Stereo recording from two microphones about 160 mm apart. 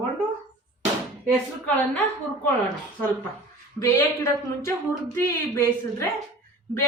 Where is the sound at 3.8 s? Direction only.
20° left (ahead or behind).